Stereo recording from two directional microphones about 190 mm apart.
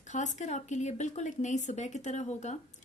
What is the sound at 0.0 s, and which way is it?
A woman's voice, 40° left (ahead or behind).